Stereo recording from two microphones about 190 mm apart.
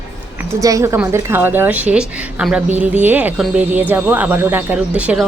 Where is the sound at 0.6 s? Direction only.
15° right (ahead or behind).